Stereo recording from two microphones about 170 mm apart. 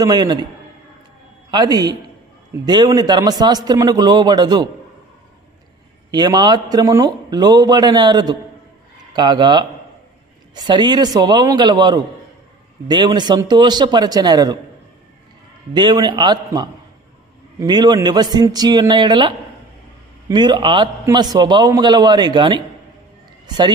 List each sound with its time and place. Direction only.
0.0 s a man's voice: 25° right (ahead or behind)
1.5 s a man's voice: 25° right (ahead or behind)
6.1 s a man's voice: 25° right (ahead or behind)
15.7 s a man's voice: 25° right (ahead or behind)